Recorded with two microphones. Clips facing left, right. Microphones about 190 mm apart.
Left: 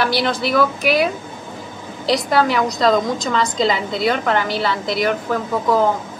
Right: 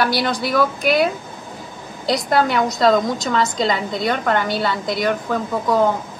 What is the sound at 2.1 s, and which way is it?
A woman's voice, centre (ahead or behind).